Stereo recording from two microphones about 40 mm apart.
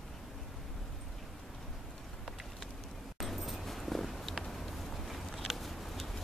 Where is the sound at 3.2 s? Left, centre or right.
Centre.